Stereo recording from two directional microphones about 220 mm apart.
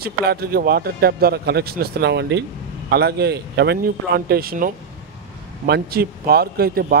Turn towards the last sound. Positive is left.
turn(degrees=-45)  # may be behind; listen again after turning